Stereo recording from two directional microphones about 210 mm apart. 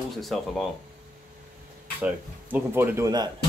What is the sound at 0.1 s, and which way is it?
Speech, centre (ahead or behind).